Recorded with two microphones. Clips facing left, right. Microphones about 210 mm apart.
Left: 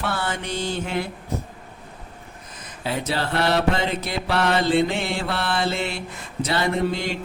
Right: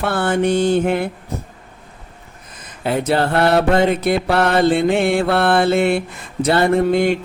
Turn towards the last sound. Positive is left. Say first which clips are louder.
# right 9 dB
turn(degrees=-55)  # may be behind; listen again after turning